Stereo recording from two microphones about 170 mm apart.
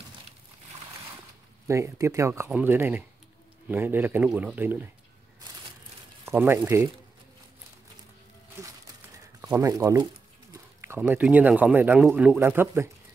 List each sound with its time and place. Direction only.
1.7 s speech: 15° right (ahead or behind)
6.2 s speech: 10° right (ahead or behind)
9.6 s speech: 20° right (ahead or behind)
10.5 s a sound: 15° right (ahead or behind)
11.0 s speech: 10° right (ahead or behind)